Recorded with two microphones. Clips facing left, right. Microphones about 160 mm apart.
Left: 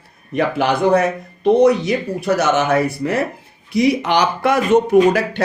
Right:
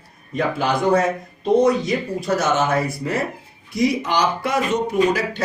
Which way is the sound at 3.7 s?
70° left (ahead or behind).